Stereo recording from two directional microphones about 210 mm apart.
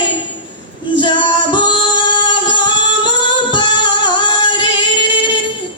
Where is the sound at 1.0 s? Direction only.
20° left (ahead or behind).